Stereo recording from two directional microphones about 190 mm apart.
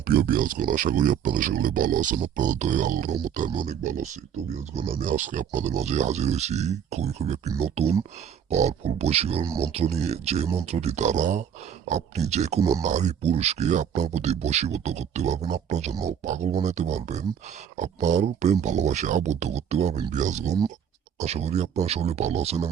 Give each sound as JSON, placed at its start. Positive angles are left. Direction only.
{"t": 0.1, "sound": "speech", "side_deg": -50}
{"t": 3.5, "sound": "speech", "side_deg": -25}
{"t": 3.8, "sound": "speech", "side_deg": -40}